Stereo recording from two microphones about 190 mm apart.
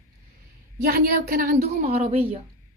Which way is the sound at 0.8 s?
55° right (ahead or behind).